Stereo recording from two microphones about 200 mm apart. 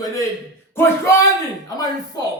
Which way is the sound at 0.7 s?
15° left (ahead or behind).